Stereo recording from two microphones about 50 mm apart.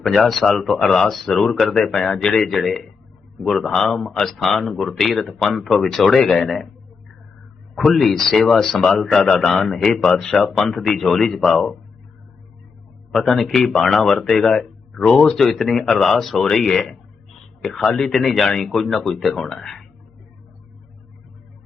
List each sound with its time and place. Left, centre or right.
0.0 s speech: centre
7.8 s speech: centre
10.2 s speech: centre
13.1 s speech: centre
17.9 s speech: centre